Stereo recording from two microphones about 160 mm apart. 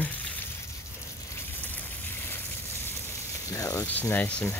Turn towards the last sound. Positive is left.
turn(degrees=15)  # may be behind; listen again after turning